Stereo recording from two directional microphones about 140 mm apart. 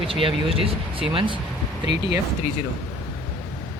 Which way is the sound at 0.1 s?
40° right (ahead or behind).